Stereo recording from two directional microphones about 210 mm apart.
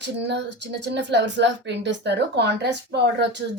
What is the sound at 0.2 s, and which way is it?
A woman's voice, 55° right (ahead or behind).